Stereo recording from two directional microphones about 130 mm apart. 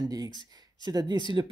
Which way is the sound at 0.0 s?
30° right (ahead or behind).